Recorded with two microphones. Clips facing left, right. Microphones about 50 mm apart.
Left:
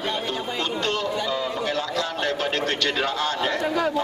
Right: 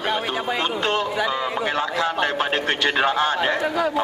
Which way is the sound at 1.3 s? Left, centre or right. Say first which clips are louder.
Right 2 dB; right.